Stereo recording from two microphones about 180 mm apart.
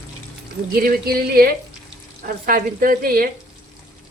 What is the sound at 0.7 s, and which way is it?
Speech, 55° right (ahead or behind).